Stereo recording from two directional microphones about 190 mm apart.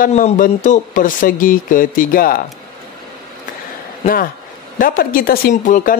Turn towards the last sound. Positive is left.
turn(degrees=45)  # may be behind; listen again after turning